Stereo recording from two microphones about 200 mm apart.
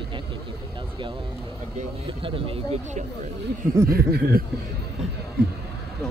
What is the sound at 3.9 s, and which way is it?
Speech, 50° right (ahead or behind).